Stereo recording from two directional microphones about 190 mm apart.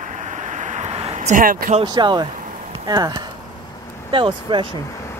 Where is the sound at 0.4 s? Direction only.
40° right (ahead or behind).